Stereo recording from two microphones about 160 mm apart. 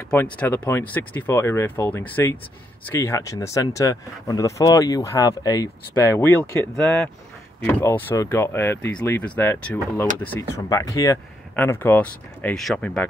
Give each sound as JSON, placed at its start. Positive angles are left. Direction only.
{"t": 0.1, "sound": "speech", "side_deg": 10}